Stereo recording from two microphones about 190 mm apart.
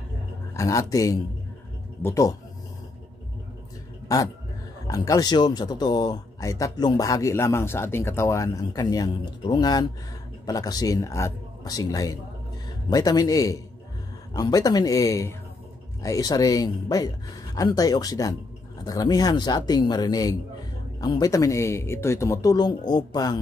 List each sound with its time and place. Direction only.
0.6 s speech: 15° left (ahead or behind)
4.8 s speech: 20° left (ahead or behind)